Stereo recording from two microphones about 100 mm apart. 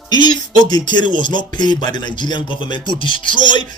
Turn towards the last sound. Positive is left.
turn(degrees=50)  # may be behind; listen again after turning